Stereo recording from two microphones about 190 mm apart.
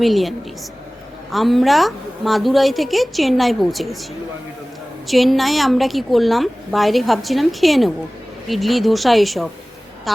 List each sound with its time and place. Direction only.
0.0 s a woman's voice: centre (ahead or behind)
5.0 s a woman's voice: centre (ahead or behind)